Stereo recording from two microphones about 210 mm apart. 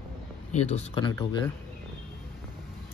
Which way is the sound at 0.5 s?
30° left (ahead or behind).